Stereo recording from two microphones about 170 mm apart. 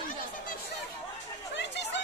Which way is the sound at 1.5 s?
90° left.